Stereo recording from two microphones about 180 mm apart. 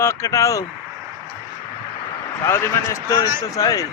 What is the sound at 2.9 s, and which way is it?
Speech, 20° left (ahead or behind).